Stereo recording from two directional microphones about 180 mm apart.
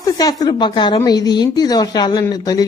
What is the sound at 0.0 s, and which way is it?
Speech, 20° left (ahead or behind).